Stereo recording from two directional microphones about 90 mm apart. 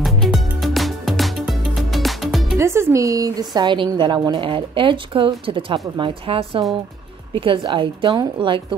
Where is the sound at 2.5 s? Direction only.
30° right (ahead or behind); by 5.8 s 75° right (ahead or behind).